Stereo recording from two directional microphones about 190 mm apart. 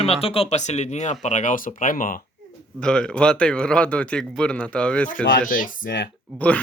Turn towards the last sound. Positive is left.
turn(degrees=10)  # may be behind; listen again after turning